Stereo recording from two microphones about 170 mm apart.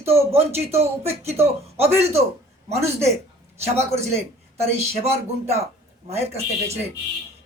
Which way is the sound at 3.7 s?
15° right (ahead or behind).